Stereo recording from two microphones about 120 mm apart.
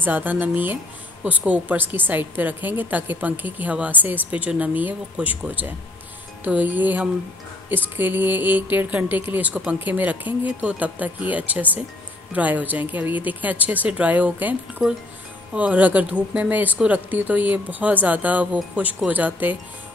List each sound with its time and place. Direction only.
0.0 s a woman's voice: 15° right (ahead or behind)